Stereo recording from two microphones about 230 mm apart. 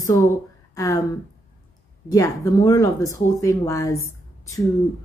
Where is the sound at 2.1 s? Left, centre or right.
Centre.